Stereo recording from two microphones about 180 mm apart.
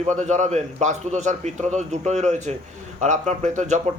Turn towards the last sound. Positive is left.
turn(degrees=-40)  # may be behind; listen again after turning